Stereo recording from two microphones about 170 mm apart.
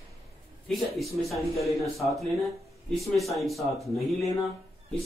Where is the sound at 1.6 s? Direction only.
Centre (ahead or behind).